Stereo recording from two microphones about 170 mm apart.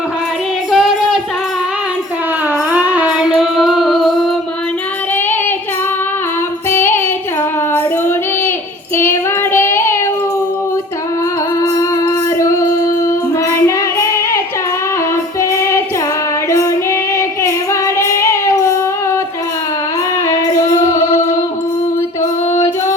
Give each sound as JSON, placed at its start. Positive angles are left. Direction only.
{"t": 0.7, "sound": "child singing", "side_deg": -5}
{"t": 2.7, "sound": "music", "side_deg": -10}
{"t": 6.7, "sound": "child singing", "side_deg": 15}
{"t": 9.0, "sound": "child singing", "side_deg": 15}
{"t": 12.4, "sound": "music", "side_deg": 20}
{"t": 17.4, "sound": "child singing", "side_deg": 15}
{"t": 20.8, "sound": "music", "side_deg": 15}